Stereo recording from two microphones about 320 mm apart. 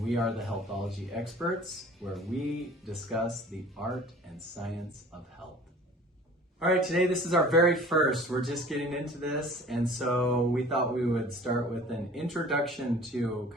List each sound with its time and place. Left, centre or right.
0.0 s speech: centre
6.6 s speech: centre